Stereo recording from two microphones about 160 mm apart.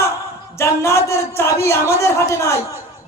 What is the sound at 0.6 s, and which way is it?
A man's voice, 15° left (ahead or behind).